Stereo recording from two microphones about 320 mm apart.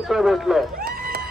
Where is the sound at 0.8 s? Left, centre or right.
Right.